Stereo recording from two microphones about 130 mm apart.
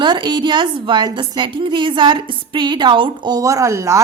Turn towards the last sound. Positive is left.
turn(degrees=-25)  # may be behind; listen again after turning